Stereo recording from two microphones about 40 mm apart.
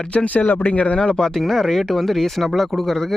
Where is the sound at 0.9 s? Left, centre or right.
Centre.